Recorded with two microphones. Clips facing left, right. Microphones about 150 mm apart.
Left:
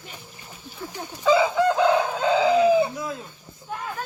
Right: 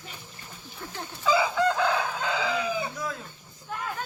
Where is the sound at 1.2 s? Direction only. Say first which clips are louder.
Left 5 dB; 20° left (ahead or behind).